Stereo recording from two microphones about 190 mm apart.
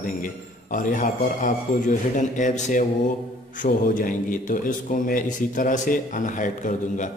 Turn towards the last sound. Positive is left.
turn(degrees=40)  # may be behind; listen again after turning